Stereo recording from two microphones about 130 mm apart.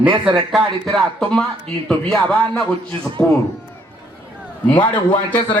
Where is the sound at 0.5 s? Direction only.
Centre (ahead or behind).